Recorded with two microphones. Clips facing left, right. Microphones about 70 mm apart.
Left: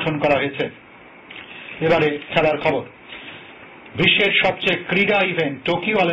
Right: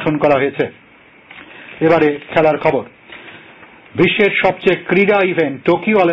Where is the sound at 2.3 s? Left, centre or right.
Right.